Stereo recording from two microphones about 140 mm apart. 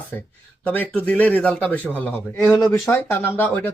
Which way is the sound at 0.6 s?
10° left (ahead or behind).